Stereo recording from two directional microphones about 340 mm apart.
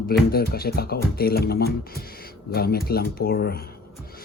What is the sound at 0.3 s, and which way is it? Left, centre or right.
Speech, left.